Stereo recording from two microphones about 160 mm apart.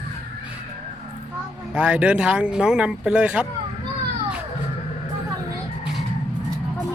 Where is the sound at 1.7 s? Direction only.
10° right (ahead or behind).